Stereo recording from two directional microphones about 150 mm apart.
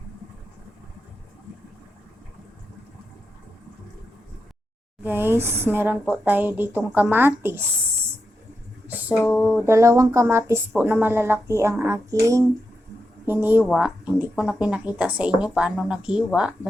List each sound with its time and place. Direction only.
5.0 s speech: 15° right (ahead or behind)
8.9 s a sound: 10° right (ahead or behind)
9.3 s speech: 10° right (ahead or behind)